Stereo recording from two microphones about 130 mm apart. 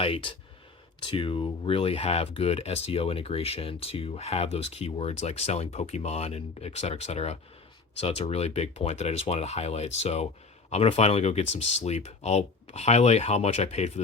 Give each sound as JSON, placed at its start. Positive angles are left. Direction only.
{"t": 0.0, "sound": "speech", "side_deg": 40}